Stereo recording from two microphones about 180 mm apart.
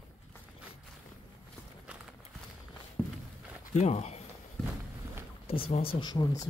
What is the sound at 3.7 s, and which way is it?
Speech, 40° left (ahead or behind).